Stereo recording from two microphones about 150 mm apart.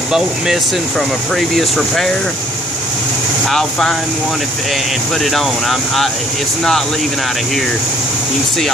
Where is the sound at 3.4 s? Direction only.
Centre (ahead or behind).